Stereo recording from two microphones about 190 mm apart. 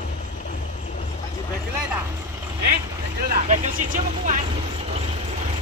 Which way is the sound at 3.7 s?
45° right (ahead or behind).